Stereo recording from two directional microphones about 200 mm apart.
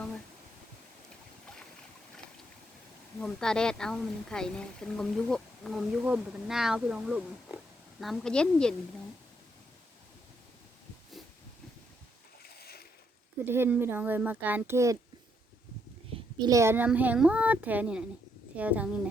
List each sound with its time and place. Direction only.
3.2 s speech: centre (ahead or behind)
12.4 s boat: 50° left (ahead or behind)
13.4 s speech: 10° right (ahead or behind)
16.4 s speech: 15° right (ahead or behind)